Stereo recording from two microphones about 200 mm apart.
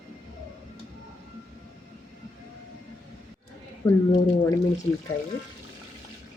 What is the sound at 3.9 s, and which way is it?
Speech, 20° left (ahead or behind).